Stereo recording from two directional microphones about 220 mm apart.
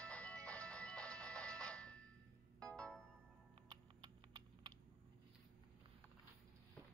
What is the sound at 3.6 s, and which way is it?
Typing, 20° right (ahead or behind).